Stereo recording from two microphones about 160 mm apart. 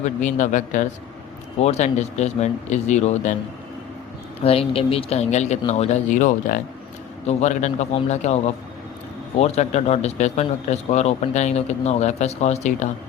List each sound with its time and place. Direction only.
0.0 s speech: 50° left (ahead or behind)
4.4 s speech: 35° left (ahead or behind)